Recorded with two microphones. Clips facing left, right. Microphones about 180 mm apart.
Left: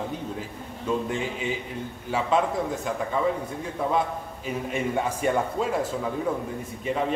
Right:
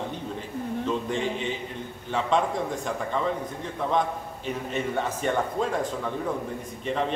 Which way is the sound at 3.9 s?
5° left (ahead or behind).